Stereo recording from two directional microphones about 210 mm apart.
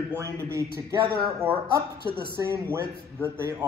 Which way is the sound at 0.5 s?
15° right (ahead or behind).